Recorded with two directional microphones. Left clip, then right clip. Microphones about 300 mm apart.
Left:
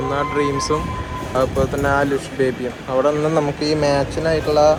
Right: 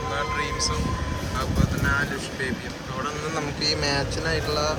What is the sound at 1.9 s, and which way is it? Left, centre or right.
Speech, centre.